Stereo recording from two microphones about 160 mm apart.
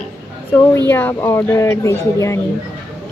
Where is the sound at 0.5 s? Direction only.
10° left (ahead or behind).